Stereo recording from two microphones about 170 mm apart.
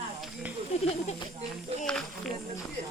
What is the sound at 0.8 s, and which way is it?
Speech, 40° left (ahead or behind).